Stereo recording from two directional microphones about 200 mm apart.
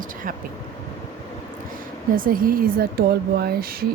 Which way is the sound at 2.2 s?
45° right (ahead or behind).